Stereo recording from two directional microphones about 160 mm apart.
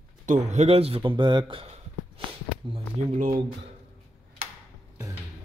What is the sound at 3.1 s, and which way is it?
Speech, 60° right (ahead or behind).